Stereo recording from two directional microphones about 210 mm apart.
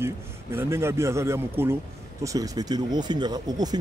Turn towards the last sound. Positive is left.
turn(degrees=-20)  # may be behind; listen again after turning